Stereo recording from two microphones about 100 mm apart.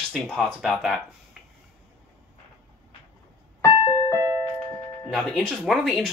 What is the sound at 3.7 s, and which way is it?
Music, 55° left (ahead or behind).